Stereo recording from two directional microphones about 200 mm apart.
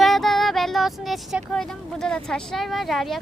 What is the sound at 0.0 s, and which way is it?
Speech, centre (ahead or behind).